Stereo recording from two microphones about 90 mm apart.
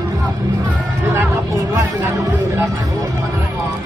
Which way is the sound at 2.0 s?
30° right (ahead or behind).